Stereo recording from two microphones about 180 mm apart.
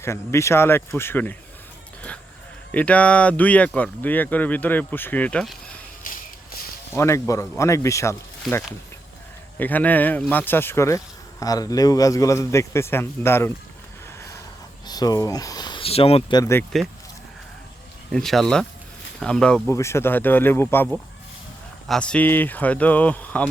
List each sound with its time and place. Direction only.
0.0 s speech: 15° left (ahead or behind)
2.7 s speech: 5° left (ahead or behind)
6.9 s speech: 15° left (ahead or behind)
14.8 s speech: 20° left (ahead or behind)
16.4 s speech: 15° left (ahead or behind)
18.1 s speech: centre (ahead or behind)